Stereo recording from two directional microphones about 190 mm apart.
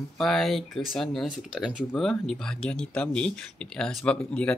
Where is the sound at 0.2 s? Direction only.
Centre (ahead or behind).